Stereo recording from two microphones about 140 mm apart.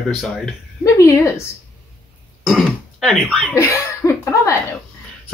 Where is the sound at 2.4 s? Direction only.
Centre (ahead or behind).